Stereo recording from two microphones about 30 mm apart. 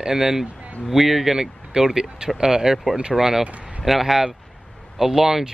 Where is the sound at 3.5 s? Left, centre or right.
Right.